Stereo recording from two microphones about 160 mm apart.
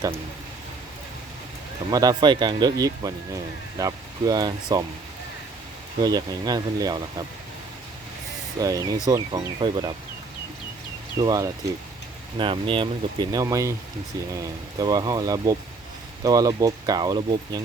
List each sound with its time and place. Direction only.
1.9 s speech: 25° right (ahead or behind)
6.0 s speech: 25° right (ahead or behind)
8.6 s speech: 20° right (ahead or behind)
11.2 s speech: 25° right (ahead or behind)